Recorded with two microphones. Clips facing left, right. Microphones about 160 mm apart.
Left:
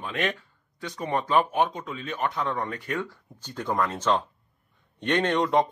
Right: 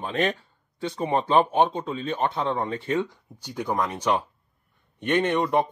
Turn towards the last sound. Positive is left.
turn(degrees=-5)  # may be behind; listen again after turning